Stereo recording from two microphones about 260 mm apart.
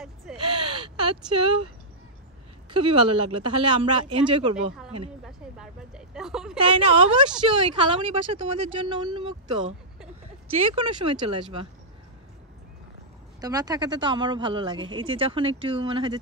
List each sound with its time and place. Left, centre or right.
0.0 s crow: centre
0.8 s speech: centre
2.7 s speech: centre
5.2 s speech: centre
6.6 s speech: centre
10.6 s speech: right
13.4 s speech: centre